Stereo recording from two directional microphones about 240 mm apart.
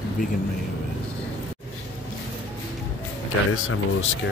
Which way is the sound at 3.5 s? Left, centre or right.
Left.